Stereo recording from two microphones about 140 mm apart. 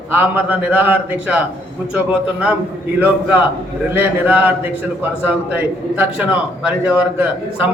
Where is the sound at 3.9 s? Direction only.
10° right (ahead or behind).